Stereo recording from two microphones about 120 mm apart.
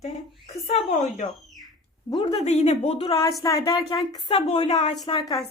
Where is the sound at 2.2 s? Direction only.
65° left (ahead or behind).